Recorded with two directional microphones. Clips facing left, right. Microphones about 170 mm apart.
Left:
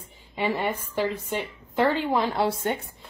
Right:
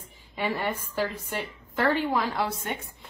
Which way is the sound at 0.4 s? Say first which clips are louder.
Left 3 dB; 15° left (ahead or behind).